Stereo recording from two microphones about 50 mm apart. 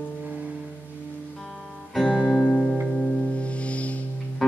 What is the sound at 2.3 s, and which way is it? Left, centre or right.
Music, centre.